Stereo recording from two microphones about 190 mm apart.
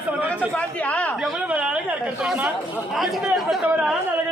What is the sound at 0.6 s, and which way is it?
Speech, 5° left (ahead or behind).